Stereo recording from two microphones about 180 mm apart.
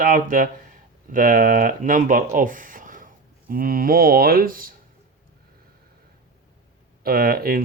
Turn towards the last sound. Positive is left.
turn(degrees=-55)  # may be behind; listen again after turning